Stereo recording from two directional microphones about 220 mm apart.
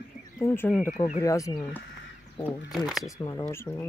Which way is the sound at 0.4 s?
10° left (ahead or behind).